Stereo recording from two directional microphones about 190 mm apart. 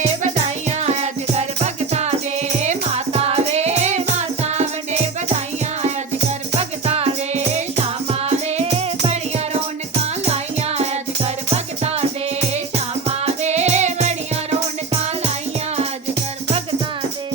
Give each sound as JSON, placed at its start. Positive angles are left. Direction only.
{"t": 0.2, "sound": "music", "side_deg": -35}